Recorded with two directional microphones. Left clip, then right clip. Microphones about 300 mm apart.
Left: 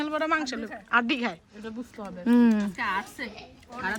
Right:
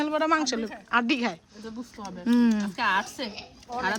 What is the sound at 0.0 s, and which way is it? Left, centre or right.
A woman's voice, centre.